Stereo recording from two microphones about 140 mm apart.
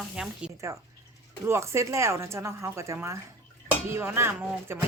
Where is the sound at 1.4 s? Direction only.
20° right (ahead or behind).